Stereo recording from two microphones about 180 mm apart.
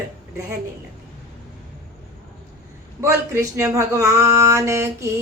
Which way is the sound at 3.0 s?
15° right (ahead or behind).